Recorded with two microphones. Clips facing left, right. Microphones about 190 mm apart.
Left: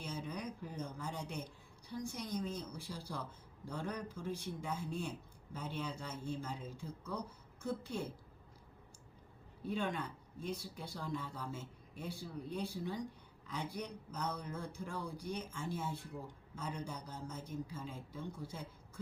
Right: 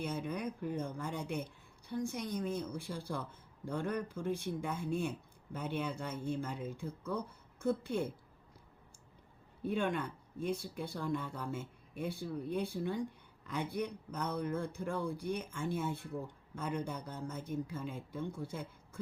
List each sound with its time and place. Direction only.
0.0 s a sound: 55° right (ahead or behind)
1.9 s speech: 55° right (ahead or behind)
9.6 s speech: 55° right (ahead or behind)